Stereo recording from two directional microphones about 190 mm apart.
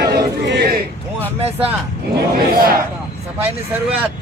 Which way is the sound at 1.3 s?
35° right (ahead or behind).